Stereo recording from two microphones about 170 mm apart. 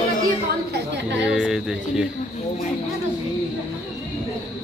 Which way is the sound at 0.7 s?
90° right.